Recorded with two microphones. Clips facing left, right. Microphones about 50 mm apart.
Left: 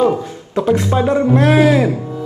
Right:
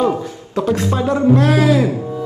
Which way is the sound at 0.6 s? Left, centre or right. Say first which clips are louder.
Left 3 dB; left.